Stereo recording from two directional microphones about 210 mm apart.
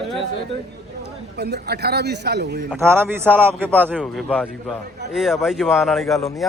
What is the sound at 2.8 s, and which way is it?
A man's voice, 10° right (ahead or behind).